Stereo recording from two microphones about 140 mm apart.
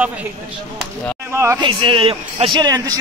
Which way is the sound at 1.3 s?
20° right (ahead or behind).